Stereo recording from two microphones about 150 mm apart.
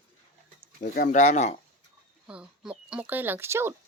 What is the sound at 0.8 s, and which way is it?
Speech, 70° left (ahead or behind).